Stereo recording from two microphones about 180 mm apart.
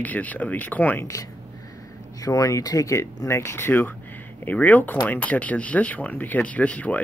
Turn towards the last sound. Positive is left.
turn(degrees=10)  # may be behind; listen again after turning